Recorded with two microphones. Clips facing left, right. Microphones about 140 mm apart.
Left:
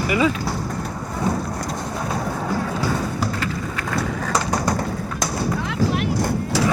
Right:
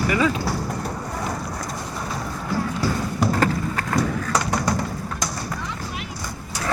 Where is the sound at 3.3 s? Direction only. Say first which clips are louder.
Right 4 dB; 45° right (ahead or behind).